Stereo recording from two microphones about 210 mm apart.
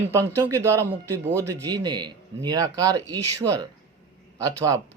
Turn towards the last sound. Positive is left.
turn(degrees=-15)  # may be behind; listen again after turning